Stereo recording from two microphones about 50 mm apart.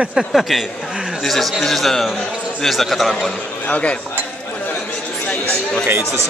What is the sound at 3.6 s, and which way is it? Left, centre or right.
Speech, left.